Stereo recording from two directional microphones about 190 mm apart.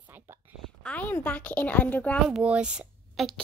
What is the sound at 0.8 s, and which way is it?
A child's voice, 5° left (ahead or behind).